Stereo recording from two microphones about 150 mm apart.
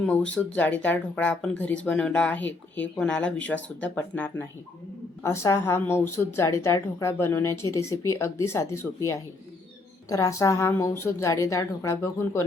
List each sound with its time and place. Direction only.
0.0 s a woman's voice: 10° left (ahead or behind)